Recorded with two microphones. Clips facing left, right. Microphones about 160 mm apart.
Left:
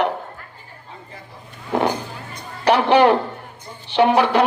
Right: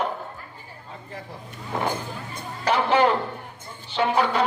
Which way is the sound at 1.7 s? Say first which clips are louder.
Left 8 dB; 80° left.